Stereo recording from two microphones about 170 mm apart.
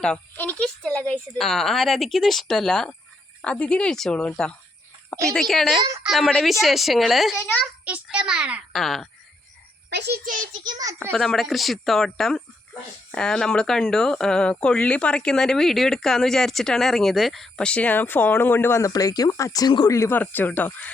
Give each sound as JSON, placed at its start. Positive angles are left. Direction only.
{"t": 0.0, "sound": "a child's voice", "side_deg": 5}
{"t": 7.9, "sound": "speech", "side_deg": -5}
{"t": 9.9, "sound": "a child's voice", "side_deg": -80}
{"t": 10.2, "sound": "a child's voice", "side_deg": -50}
{"t": 10.6, "sound": "a child's voice", "side_deg": -25}
{"t": 11.1, "sound": "speech", "side_deg": 0}